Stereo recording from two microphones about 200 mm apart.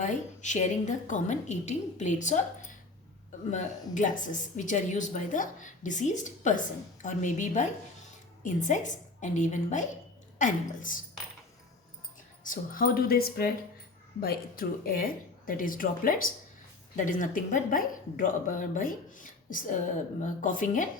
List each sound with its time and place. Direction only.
0.0 s a woman's voice: 35° left (ahead or behind)
12.4 s a woman's voice: 45° left (ahead or behind)